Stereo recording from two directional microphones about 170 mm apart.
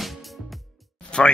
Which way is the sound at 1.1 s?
5° left (ahead or behind).